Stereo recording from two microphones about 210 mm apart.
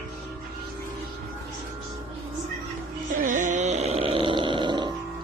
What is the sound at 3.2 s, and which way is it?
Music, 40° right (ahead or behind).